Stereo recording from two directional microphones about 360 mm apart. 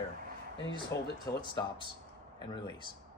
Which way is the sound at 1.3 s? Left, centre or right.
Centre.